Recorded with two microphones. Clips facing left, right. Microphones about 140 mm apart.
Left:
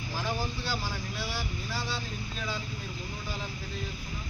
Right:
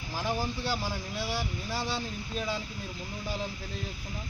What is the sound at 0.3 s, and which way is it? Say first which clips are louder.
Speech: right 2 dB; 20° right (ahead or behind).